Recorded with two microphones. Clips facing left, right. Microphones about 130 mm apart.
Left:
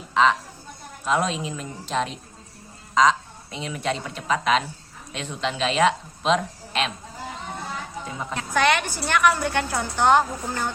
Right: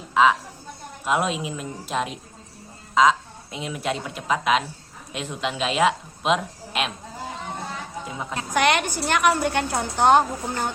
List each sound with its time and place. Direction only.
0.1 s a sound: 5° right (ahead or behind)
1.0 s a woman's voice: 10° right (ahead or behind)
8.4 s a woman's voice: 20° right (ahead or behind)